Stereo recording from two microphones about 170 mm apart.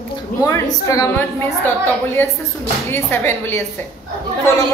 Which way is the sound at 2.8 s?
15° left (ahead or behind).